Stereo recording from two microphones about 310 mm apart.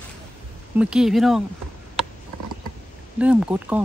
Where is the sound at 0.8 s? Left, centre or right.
Centre.